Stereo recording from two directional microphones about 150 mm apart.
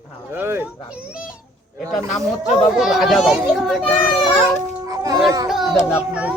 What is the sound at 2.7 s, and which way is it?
Speech, centre (ahead or behind).